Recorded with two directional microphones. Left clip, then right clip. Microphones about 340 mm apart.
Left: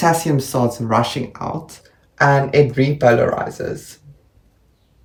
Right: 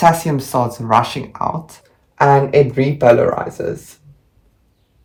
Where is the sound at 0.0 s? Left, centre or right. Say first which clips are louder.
Right 3 dB; centre.